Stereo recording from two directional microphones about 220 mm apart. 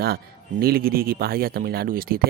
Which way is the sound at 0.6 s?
45° right (ahead or behind).